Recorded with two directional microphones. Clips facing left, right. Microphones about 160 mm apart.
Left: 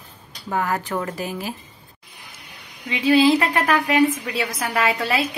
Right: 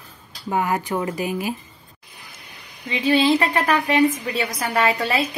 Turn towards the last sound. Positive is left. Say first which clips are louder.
# right 1 dB
turn(degrees=0)  # may be behind; listen again after turning